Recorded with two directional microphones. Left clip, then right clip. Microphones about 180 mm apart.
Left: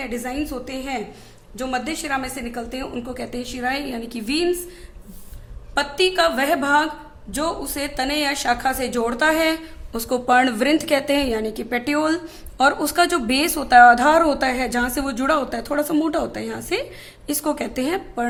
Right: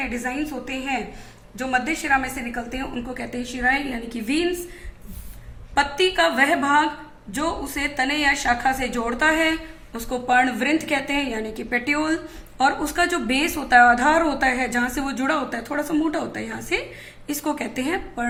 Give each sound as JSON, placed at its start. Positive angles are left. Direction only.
{"t": 0.0, "sound": "a woman's voice", "side_deg": 45}
{"t": 5.7, "sound": "a woman's voice", "side_deg": 40}